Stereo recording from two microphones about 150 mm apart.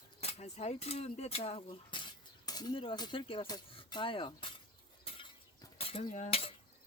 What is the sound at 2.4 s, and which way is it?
Speech, 25° left (ahead or behind).